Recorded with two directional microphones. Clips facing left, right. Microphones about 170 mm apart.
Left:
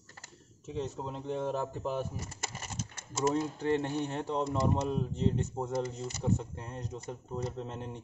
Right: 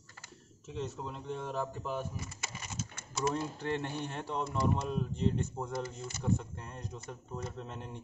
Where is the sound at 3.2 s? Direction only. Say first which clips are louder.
Left 4 dB; 20° left (ahead or behind).